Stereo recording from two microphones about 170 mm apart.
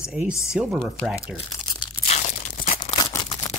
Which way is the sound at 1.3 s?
35° left (ahead or behind).